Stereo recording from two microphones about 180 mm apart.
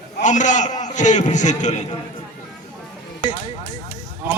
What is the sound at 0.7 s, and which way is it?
Speech, 25° left (ahead or behind).